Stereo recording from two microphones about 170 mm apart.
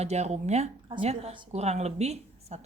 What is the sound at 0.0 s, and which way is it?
A woman's voice, 40° right (ahead or behind).